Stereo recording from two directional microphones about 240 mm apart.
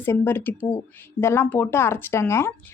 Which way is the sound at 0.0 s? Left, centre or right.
Centre.